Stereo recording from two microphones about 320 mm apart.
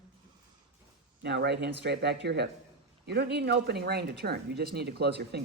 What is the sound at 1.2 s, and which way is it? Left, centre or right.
Speech, right.